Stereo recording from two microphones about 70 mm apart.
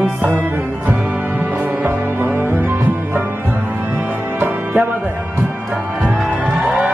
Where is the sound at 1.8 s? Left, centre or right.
Right.